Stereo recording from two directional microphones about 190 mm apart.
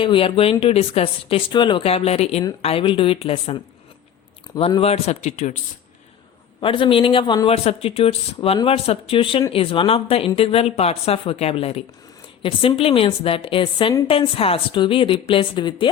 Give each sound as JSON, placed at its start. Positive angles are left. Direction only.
{"t": 0.0, "sound": "speech", "side_deg": 30}
{"t": 6.6, "sound": "speech", "side_deg": 25}